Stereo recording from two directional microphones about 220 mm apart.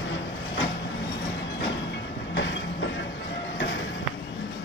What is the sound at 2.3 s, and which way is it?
Train, 55° left (ahead or behind).